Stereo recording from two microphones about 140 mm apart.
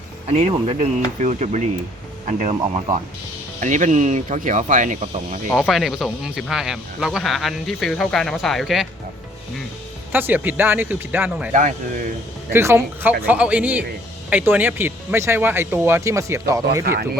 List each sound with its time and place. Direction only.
0.3 s speech: 50° right (ahead or behind)
5.5 s speech: centre (ahead or behind)
10.1 s speech: 15° right (ahead or behind)
11.5 s speech: 65° right (ahead or behind)
12.5 s speech: 20° right (ahead or behind)